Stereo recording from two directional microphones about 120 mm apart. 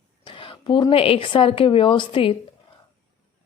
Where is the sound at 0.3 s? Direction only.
45° left (ahead or behind).